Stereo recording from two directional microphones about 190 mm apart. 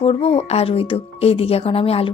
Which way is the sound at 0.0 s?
30° left (ahead or behind).